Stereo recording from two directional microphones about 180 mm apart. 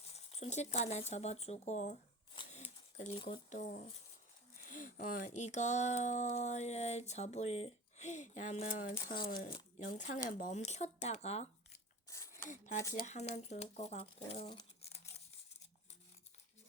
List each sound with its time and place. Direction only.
0.1 s speech: 35° left (ahead or behind)
2.5 s a sound: 35° left (ahead or behind)
3.5 s speech: 45° left (ahead or behind)
9.5 s speech: 30° left (ahead or behind)
10.2 s speech: 45° left (ahead or behind)
12.0 s a sound: 15° left (ahead or behind)
12.5 s speech: 45° left (ahead or behind)